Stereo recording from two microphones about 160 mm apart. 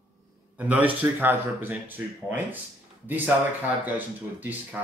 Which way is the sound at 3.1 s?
10° right (ahead or behind).